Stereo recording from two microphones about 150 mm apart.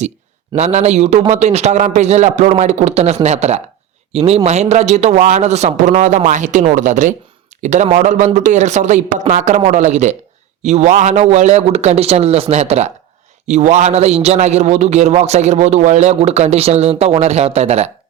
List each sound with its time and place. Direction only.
0.5 s a man's voice: 50° right (ahead or behind)